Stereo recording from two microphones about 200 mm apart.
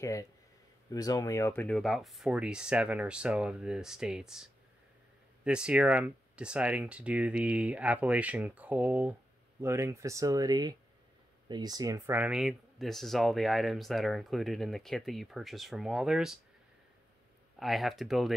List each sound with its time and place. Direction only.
0.0 s speech: 15° left (ahead or behind); by 16.3 s centre (ahead or behind)
17.6 s speech: centre (ahead or behind)